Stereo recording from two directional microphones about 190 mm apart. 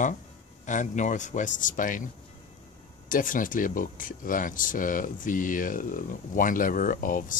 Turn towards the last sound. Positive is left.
turn(degrees=45)  # may be behind; listen again after turning